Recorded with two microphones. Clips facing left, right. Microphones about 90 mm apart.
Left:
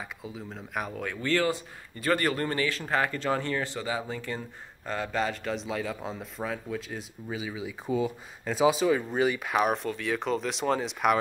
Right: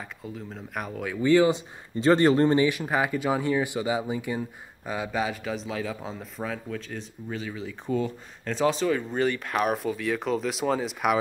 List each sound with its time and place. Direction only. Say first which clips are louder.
0.0 s speech: right 1 dB; centre (ahead or behind)
1.2 s speech: right 7 dB; 15° right (ahead or behind)